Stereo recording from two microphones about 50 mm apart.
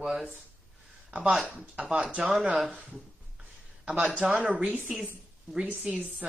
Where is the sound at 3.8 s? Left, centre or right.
Right.